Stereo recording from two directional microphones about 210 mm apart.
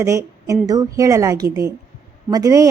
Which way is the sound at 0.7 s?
15° right (ahead or behind).